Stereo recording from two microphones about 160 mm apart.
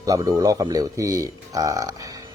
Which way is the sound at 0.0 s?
20° right (ahead or behind).